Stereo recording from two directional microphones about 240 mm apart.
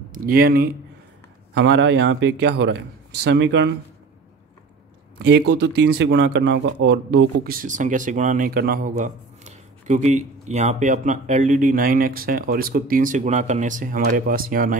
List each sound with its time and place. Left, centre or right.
0.1 s a man's voice: right
5.5 s speech: right